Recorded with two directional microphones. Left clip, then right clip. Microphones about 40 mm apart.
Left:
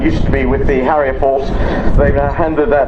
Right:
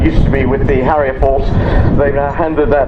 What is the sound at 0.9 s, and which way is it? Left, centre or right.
A man's voice, centre.